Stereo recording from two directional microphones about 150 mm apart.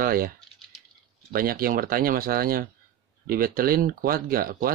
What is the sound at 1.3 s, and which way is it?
Speech, 75° right (ahead or behind).